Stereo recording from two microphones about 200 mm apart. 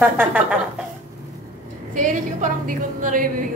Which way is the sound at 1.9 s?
40° right (ahead or behind).